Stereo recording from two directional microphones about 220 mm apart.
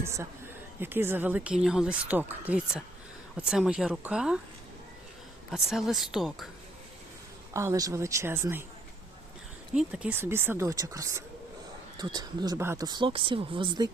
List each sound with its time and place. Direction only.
0.0 s a woman's voice: 10° right (ahead or behind)
5.5 s a woman's voice: centre (ahead or behind)
7.5 s speech: 15° right (ahead or behind)
9.7 s speech: 5° right (ahead or behind); by 13.9 s 20° right (ahead or behind)